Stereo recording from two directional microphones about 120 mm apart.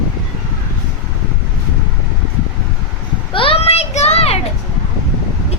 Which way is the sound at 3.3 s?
50° left (ahead or behind).